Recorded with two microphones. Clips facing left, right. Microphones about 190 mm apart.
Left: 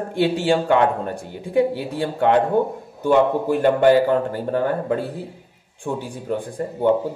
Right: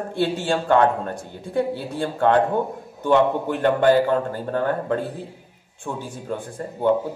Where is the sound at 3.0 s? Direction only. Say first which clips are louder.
Left 1 dB; 10° left (ahead or behind).